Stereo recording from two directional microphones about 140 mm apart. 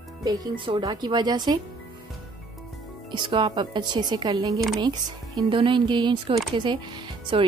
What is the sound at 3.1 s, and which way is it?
Speech, 35° right (ahead or behind).